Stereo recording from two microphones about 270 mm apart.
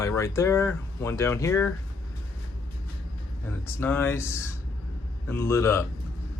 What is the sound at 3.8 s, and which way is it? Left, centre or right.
Speech, centre.